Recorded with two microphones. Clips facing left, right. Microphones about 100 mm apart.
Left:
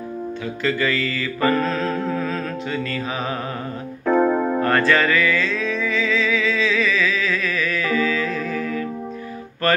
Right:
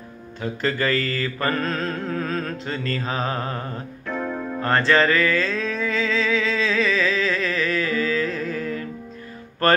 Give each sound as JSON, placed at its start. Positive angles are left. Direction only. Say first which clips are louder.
{"t": 0.4, "sound": "mantra", "louder": "even", "side_deg": -40}
{"t": 4.0, "sound": "keyboard", "louder": "left 11 dB", "side_deg": 55}
{"t": 4.6, "sound": "music", "louder": "right 2 dB", "side_deg": -30}